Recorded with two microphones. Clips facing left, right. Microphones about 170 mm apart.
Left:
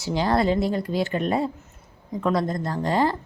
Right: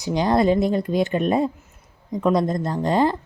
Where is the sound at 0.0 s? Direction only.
20° right (ahead or behind).